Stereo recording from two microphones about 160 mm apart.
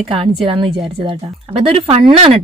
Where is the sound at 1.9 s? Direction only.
35° right (ahead or behind).